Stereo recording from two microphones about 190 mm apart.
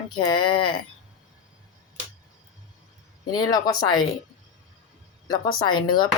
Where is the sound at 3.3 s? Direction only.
20° left (ahead or behind).